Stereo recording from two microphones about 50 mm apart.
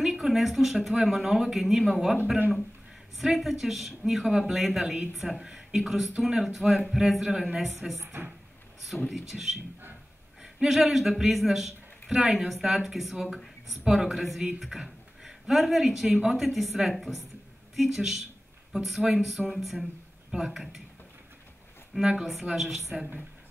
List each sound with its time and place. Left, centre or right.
0.0 s speech: centre
3.2 s speech: centre
7.5 s speech: centre
9.1 s a man's voice: centre
13.3 s a sound: centre
13.8 s speech: centre
22.0 s speech: centre